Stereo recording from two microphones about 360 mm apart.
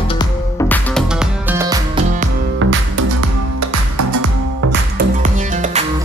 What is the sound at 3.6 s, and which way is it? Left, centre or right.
Music, right.